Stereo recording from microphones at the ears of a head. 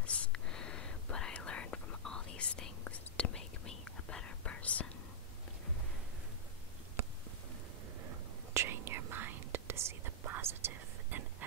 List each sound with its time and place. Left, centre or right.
0.0 s whispering: left
8.0 s whispering: right